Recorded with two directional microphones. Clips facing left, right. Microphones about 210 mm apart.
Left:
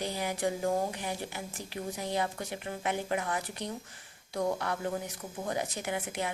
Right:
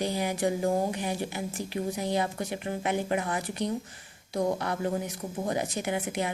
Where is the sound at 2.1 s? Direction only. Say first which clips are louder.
Right 4 dB; 20° right (ahead or behind).